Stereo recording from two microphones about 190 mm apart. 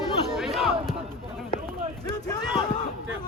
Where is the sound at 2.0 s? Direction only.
20° left (ahead or behind).